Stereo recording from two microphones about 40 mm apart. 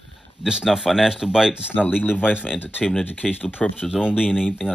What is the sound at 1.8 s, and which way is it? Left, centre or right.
Speech, left.